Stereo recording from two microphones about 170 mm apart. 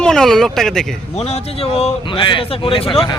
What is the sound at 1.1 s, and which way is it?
Speech, 40° left (ahead or behind).